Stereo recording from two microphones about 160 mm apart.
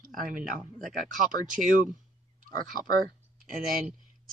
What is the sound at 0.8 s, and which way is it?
Speech, centre (ahead or behind).